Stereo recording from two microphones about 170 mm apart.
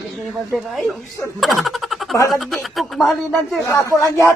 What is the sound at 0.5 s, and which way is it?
Speech, centre (ahead or behind).